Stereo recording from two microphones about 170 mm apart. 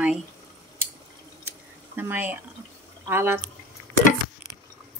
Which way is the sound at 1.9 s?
10° right (ahead or behind).